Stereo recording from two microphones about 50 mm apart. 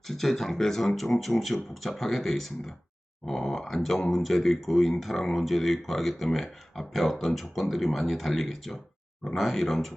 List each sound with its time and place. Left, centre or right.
0.1 s speech: centre